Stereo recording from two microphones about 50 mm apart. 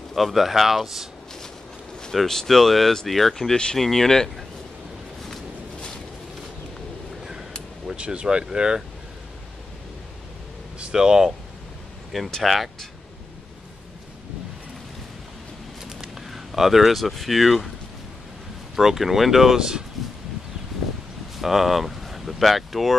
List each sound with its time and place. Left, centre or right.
0.1 s speech: centre
2.1 s speech: centre
7.8 s speech: centre
10.8 s speech: centre
12.1 s speech: centre
15.9 s speech: centre
18.8 s speech: centre
21.4 s speech: centre